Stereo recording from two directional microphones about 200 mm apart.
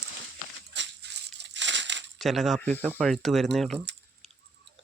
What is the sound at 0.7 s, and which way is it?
Crushing, 60° right (ahead or behind).